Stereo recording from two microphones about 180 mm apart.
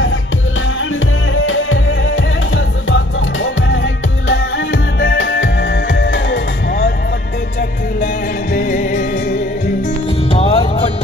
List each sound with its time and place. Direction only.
1.3 s music: 90° left
5.0 s music: 70° left (ahead or behind)
8.5 s music: 50° left (ahead or behind)
10.3 s music: 30° left (ahead or behind)